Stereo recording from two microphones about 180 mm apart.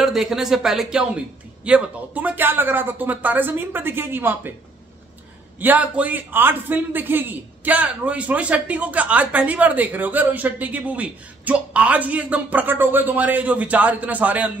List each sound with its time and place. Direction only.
0.0 s a man's voice: centre (ahead or behind)
5.6 s a man's voice: 10° right (ahead or behind)